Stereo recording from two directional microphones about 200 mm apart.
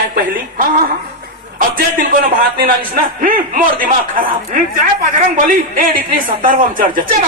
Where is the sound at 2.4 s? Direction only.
50° right (ahead or behind).